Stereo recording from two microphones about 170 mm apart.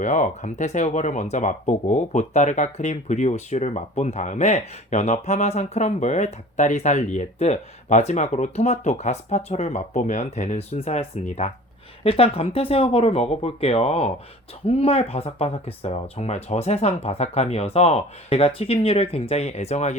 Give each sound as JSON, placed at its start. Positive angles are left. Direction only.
{"t": 0.0, "sound": "speech", "side_deg": 45}